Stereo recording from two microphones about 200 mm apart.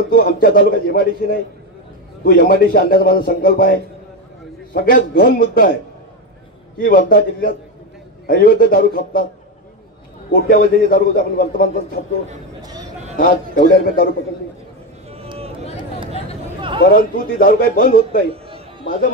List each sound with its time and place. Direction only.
0.1 s a man's voice: 45° left (ahead or behind)
6.8 s a man's voice: 45° left (ahead or behind)
10.3 s a man's voice: 50° left (ahead or behind)
12.6 s a sound: 20° right (ahead or behind)
13.2 s a man's voice: 45° left (ahead or behind)
15.0 s a sound: 30° right (ahead or behind)
16.9 s a man's voice: 45° left (ahead or behind)